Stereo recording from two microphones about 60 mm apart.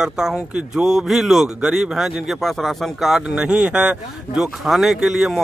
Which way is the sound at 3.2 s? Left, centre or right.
Centre.